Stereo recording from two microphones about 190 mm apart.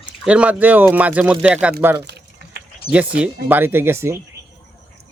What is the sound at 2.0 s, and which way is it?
Typing, 60° right (ahead or behind).